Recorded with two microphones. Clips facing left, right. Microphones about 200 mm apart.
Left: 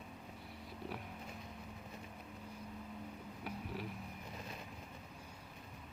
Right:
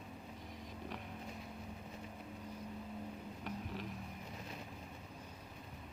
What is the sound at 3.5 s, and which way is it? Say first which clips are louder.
Vehicle: right 1 dB; 10° left (ahead or behind).